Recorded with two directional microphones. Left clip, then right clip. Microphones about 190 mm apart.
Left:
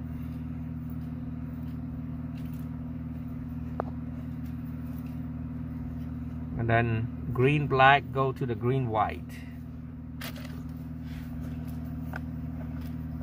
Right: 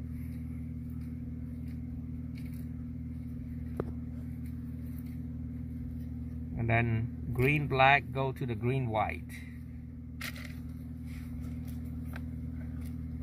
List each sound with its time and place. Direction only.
6.6 s speech: 20° right (ahead or behind)